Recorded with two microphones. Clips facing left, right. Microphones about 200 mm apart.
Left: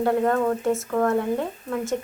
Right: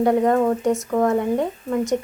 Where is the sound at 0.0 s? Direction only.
15° right (ahead or behind).